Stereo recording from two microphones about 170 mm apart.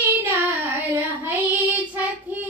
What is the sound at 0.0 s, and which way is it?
Child singing, 15° right (ahead or behind).